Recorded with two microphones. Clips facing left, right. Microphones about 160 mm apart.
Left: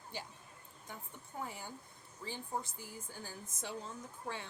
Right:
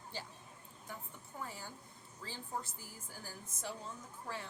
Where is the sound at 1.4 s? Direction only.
20° left (ahead or behind).